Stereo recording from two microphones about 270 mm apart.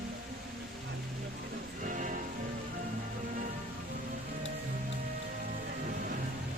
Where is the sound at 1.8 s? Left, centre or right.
Right.